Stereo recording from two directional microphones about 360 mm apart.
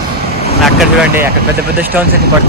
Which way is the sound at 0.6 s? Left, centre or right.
Centre.